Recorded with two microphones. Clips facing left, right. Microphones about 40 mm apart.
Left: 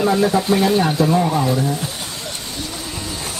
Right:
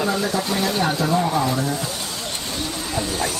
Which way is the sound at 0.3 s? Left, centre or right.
Centre.